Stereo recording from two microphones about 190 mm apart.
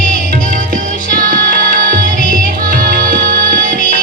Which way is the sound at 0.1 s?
45° right (ahead or behind).